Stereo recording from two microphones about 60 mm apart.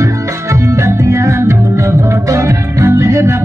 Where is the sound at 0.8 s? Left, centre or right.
Right.